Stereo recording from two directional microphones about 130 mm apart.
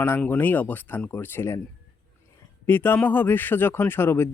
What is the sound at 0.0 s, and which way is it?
Speech, 15° left (ahead or behind).